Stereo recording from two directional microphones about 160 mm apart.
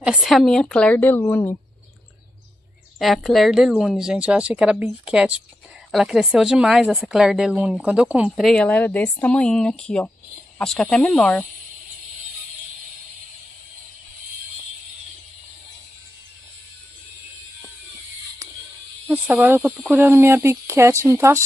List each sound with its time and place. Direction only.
0.0 s a woman's voice: 5° right (ahead or behind); by 1.6 s 15° left (ahead or behind)
3.0 s speech: centre (ahead or behind)
19.0 s speech: 10° right (ahead or behind)